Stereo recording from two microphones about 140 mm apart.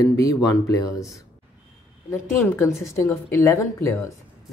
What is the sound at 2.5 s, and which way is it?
A man's voice, 15° left (ahead or behind).